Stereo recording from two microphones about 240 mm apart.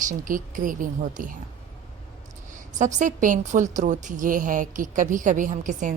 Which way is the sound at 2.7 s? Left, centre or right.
Right.